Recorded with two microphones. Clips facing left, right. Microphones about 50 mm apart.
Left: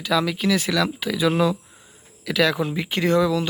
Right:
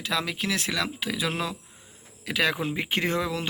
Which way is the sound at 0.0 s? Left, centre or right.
Centre.